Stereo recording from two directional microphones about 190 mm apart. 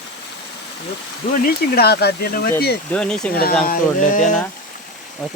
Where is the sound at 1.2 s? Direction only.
45° left (ahead or behind).